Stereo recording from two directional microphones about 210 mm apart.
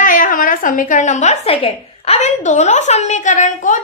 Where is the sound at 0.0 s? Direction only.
40° left (ahead or behind).